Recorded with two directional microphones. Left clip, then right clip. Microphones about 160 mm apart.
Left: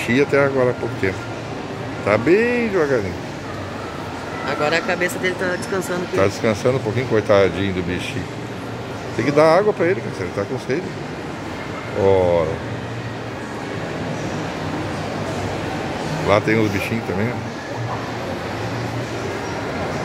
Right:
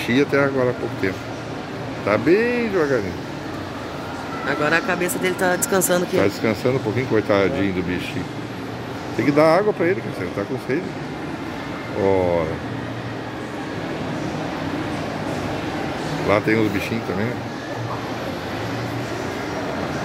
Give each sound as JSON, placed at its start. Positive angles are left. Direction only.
{"t": 0.0, "sound": "speech", "side_deg": 5}
{"t": 4.5, "sound": "speech", "side_deg": -50}
{"t": 5.0, "sound": "speech", "side_deg": -90}
{"t": 6.1, "sound": "speech", "side_deg": 0}
{"t": 9.2, "sound": "speech", "side_deg": 0}
{"t": 12.1, "sound": "speech", "side_deg": 0}
{"t": 16.3, "sound": "speech", "side_deg": 0}